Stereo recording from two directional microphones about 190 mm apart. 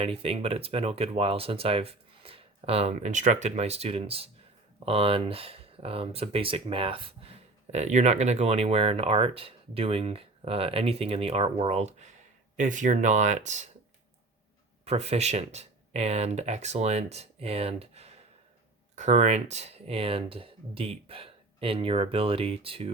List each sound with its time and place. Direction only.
0.0 s speech: 30° right (ahead or behind)
14.8 s speech: 30° right (ahead or behind)